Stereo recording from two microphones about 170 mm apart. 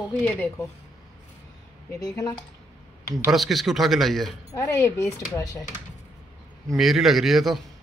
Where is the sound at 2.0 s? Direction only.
20° left (ahead or behind).